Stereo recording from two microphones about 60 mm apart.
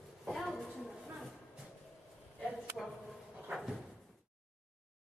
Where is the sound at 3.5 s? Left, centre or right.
Centre.